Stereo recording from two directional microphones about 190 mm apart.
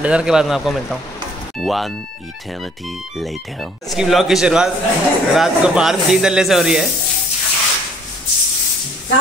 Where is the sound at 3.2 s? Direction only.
Centre (ahead or behind).